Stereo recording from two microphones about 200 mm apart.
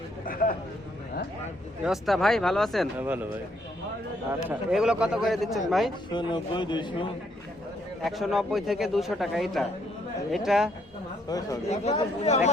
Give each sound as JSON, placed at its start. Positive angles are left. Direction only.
{"t": 0.3, "sound": "speech", "side_deg": 45}
{"t": 1.8, "sound": "a man's voice", "side_deg": 0}
{"t": 3.0, "sound": "speech", "side_deg": -10}
{"t": 4.3, "sound": "a man's voice", "side_deg": -5}
{"t": 6.1, "sound": "speech", "side_deg": 25}
{"t": 8.0, "sound": "a man's voice", "side_deg": 0}
{"t": 11.3, "sound": "speech", "side_deg": 20}
{"t": 11.7, "sound": "speech", "side_deg": 35}